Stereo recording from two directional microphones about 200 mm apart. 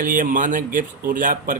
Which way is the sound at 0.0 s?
40° right (ahead or behind).